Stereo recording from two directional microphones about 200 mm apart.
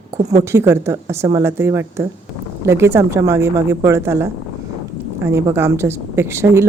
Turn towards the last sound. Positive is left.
turn(degrees=-15)  # may be behind; listen again after turning